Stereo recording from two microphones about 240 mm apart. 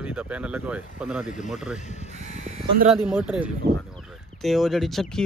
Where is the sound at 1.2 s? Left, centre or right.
Left.